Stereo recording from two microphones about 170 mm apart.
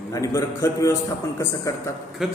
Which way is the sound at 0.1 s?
20° left (ahead or behind).